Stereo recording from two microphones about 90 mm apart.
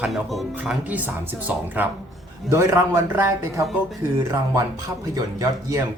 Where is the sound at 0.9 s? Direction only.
20° right (ahead or behind).